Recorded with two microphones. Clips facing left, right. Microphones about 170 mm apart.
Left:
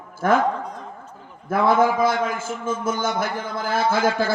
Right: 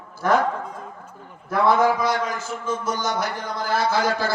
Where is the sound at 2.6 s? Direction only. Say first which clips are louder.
Left 2 dB; 50° left (ahead or behind).